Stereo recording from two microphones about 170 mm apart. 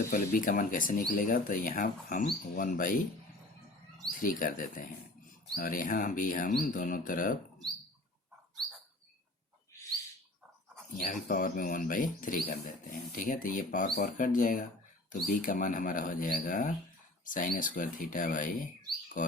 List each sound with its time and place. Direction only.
0.1 s speech: 50° left (ahead or behind)
4.2 s speech: 55° left (ahead or behind)
10.9 s speech: 50° left (ahead or behind)